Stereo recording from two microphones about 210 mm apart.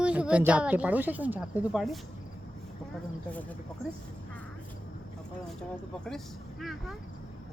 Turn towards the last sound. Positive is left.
turn(degrees=0)  # may be behind; listen again after turning